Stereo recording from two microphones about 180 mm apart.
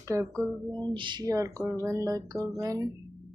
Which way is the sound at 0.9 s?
25° right (ahead or behind).